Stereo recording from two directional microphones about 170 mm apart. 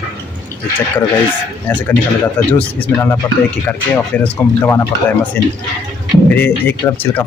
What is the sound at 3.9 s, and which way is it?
Speech, 10° left (ahead or behind).